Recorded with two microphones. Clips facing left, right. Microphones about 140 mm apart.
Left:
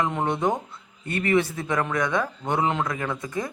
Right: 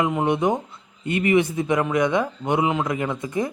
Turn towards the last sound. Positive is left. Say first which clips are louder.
# right 4 dB
turn(degrees=-20)  # may be behind; listen again after turning